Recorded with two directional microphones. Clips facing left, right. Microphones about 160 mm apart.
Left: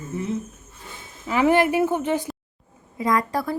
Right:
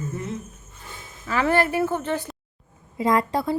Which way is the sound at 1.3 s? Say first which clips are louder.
Left 3 dB; 15° left (ahead or behind).